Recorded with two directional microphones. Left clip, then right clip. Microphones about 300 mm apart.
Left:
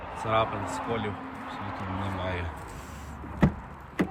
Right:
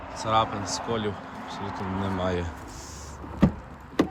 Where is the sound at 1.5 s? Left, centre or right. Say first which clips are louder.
Right 3 dB; right.